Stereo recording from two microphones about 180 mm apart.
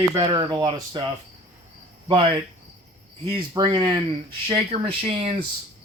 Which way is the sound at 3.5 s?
25° right (ahead or behind).